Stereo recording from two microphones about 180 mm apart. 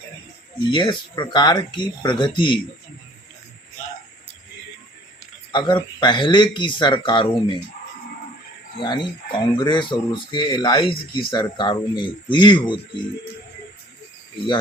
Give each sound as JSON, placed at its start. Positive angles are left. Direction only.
{"t": 0.7, "sound": "speech", "side_deg": 25}
{"t": 5.5, "sound": "speech", "side_deg": 25}
{"t": 8.8, "sound": "speech", "side_deg": 25}